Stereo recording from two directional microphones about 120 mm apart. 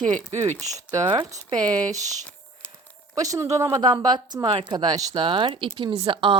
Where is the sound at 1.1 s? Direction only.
30° right (ahead or behind).